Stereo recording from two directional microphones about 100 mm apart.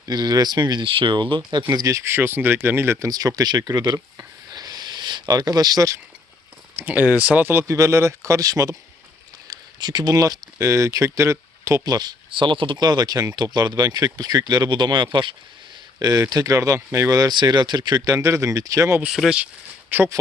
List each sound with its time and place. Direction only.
0.0 s speech: 45° right (ahead or behind)
1.7 s speech: 35° right (ahead or behind)
3.1 s speech: 40° right (ahead or behind)
6.7 s speech: 15° right (ahead or behind)
11.9 s speech: 45° right (ahead or behind)
19.0 s speech: 5° right (ahead or behind)
19.9 s speech: 20° right (ahead or behind)